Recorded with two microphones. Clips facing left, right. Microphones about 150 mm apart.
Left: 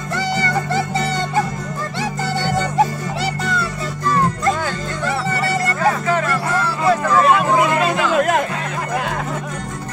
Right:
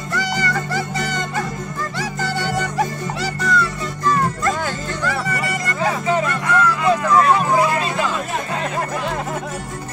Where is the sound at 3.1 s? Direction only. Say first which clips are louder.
Right 2 dB; 30° left (ahead or behind).